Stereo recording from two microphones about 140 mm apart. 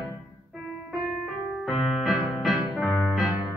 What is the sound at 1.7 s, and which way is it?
Music, centre (ahead or behind).